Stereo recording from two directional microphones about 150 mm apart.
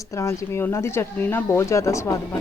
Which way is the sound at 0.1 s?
20° left (ahead or behind).